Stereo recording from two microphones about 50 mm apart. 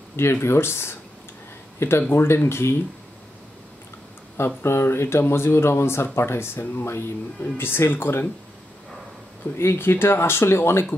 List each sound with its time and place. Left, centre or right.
0.1 s speech: left
4.6 s speech: left
9.6 s speech: left